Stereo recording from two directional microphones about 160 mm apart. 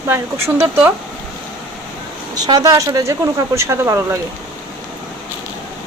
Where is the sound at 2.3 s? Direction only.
25° right (ahead or behind).